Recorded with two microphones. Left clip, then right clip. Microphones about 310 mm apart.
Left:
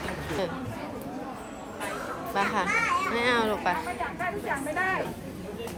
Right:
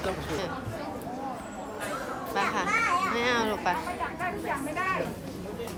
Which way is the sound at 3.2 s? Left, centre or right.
Centre.